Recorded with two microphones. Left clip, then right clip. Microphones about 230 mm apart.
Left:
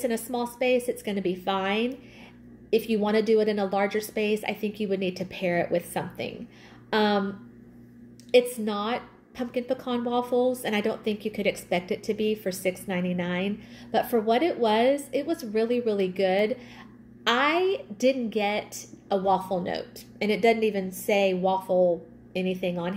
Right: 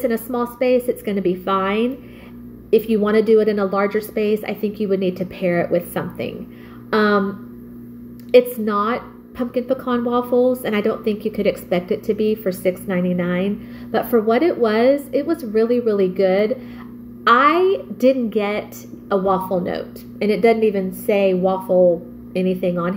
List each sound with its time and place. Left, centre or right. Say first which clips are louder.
0.0 s a woman's voice: right 7 dB; centre
3.1 s a woman's voice: right 8 dB; centre
8.3 s a woman's voice: right 8 dB; centre
10.3 s speech: right 8 dB; left
10.6 s a woman's voice: right 7 dB; centre